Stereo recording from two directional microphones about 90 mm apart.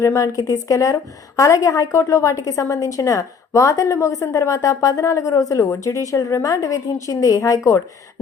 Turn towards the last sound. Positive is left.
turn(degrees=40)  # may be behind; listen again after turning